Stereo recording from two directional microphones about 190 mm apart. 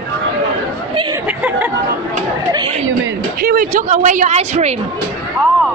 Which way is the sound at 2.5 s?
25° right (ahead or behind).